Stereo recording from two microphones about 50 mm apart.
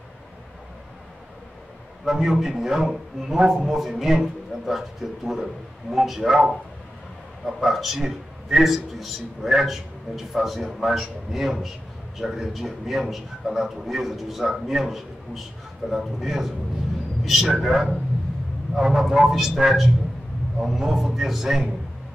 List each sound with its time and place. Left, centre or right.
2.0 s a man's voice: centre